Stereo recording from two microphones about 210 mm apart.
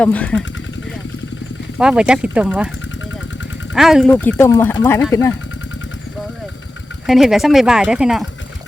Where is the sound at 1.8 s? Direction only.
5° right (ahead or behind).